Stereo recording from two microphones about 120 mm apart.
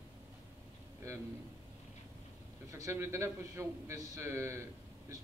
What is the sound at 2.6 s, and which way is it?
A man's voice, 25° right (ahead or behind).